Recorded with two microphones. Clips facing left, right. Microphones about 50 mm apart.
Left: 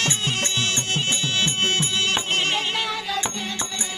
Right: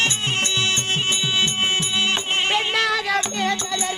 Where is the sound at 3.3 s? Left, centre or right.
Right.